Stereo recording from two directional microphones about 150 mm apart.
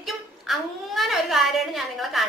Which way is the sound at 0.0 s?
Centre (ahead or behind).